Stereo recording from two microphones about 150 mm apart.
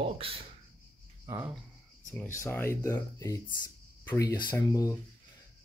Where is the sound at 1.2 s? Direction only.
15° right (ahead or behind).